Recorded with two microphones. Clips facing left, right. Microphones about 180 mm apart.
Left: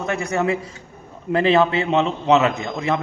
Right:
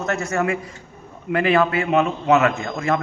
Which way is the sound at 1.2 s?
30° left (ahead or behind).